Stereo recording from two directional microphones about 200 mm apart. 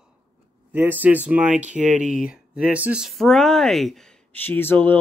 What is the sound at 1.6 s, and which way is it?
Speech, 40° right (ahead or behind).